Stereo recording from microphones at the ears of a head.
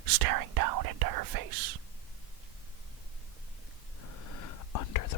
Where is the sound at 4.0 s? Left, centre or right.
Left.